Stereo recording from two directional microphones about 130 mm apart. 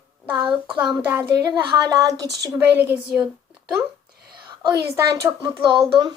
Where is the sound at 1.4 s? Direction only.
30° right (ahead or behind).